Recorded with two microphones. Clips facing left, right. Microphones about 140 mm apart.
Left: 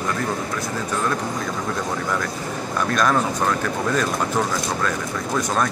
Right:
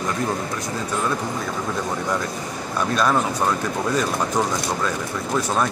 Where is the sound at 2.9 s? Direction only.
10° right (ahead or behind).